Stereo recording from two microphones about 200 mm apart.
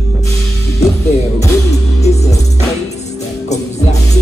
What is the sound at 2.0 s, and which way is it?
Music, 35° left (ahead or behind).